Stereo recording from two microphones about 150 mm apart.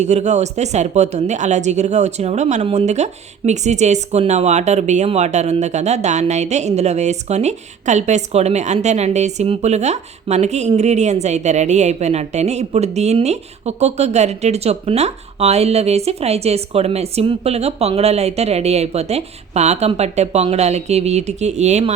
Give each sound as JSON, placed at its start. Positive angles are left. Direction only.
{"t": 0.0, "sound": "speech", "side_deg": -50}